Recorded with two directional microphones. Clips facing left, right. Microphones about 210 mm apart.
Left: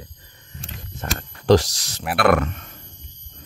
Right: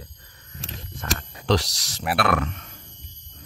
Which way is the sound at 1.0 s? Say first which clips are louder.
Left 1 dB; 30° left (ahead or behind).